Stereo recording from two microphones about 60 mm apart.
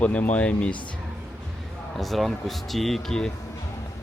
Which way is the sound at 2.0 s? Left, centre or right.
Centre.